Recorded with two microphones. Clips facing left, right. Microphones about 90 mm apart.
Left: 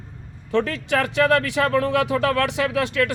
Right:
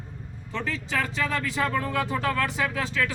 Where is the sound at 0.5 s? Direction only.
65° left (ahead or behind).